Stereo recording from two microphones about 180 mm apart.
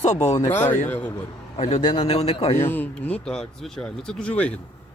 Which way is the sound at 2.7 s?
10° left (ahead or behind).